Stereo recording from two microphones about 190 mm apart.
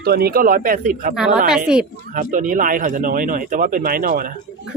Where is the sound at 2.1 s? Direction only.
45° right (ahead or behind).